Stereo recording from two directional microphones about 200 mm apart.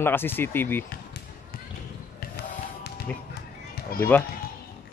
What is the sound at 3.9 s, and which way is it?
Speech, 50° left (ahead or behind).